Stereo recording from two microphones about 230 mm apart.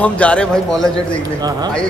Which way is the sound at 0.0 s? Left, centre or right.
Centre.